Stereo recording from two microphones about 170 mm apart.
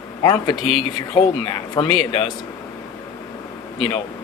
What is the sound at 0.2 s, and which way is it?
Speech, 25° left (ahead or behind).